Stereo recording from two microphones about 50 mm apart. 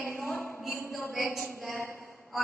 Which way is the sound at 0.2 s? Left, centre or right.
Centre.